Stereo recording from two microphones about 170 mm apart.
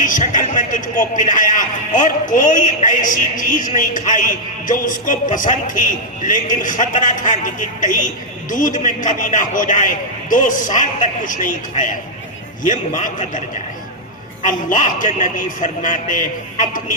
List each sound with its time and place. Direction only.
0.0 s a man's voice: 50° left (ahead or behind)
14.4 s a man's voice: 45° left (ahead or behind)